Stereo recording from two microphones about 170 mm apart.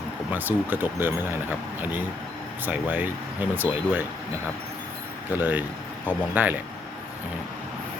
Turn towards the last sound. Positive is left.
turn(degrees=-10)  # may be behind; listen again after turning